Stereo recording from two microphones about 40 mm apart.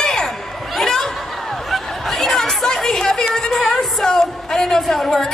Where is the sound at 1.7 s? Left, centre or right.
Centre.